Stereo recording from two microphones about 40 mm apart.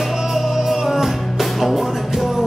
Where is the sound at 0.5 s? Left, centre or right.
Centre.